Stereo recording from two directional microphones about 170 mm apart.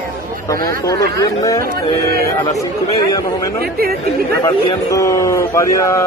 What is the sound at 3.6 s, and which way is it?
Speech, 65° right (ahead or behind).